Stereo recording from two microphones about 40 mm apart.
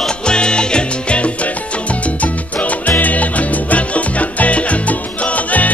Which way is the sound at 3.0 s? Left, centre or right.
Left.